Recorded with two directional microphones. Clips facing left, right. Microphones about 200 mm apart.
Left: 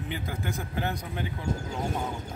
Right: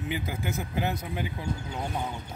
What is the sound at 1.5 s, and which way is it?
Speech, 45° left (ahead or behind).